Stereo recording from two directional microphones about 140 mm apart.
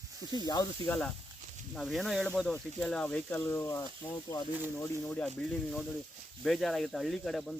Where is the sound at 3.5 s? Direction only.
20° left (ahead or behind).